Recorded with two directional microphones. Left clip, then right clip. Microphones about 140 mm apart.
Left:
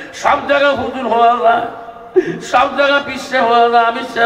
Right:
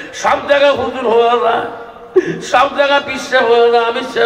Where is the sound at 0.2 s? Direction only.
25° right (ahead or behind).